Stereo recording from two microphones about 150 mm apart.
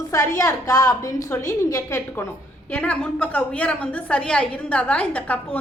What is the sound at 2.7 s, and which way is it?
A woman's voice, 10° left (ahead or behind).